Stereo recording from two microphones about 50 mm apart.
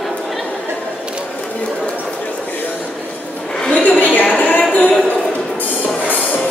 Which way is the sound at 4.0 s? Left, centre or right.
Left.